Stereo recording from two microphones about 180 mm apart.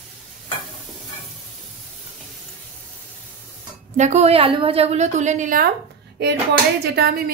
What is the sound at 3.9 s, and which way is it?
Speech, 40° right (ahead or behind).